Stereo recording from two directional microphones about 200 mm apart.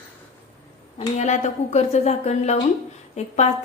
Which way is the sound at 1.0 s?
35° left (ahead or behind).